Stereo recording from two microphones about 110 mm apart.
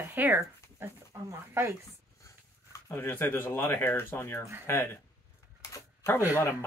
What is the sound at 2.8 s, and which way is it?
Speech, 20° left (ahead or behind).